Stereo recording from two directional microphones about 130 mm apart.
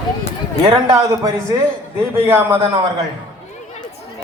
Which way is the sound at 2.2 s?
15° right (ahead or behind).